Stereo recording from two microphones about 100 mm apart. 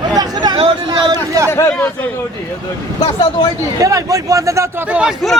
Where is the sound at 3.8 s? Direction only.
35° right (ahead or behind).